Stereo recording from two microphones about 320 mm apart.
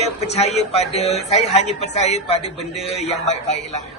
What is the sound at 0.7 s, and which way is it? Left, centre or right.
A man's voice, centre.